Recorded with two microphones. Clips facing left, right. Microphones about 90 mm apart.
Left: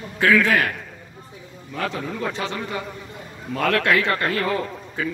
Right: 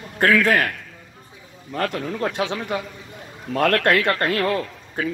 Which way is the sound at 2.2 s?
70° right (ahead or behind).